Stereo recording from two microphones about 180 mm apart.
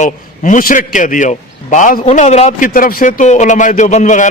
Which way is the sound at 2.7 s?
50° left (ahead or behind).